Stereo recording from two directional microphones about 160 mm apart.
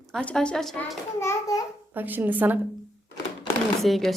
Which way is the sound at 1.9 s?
10° right (ahead or behind).